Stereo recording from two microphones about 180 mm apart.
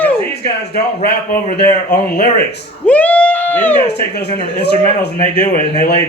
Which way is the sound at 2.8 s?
10° left (ahead or behind).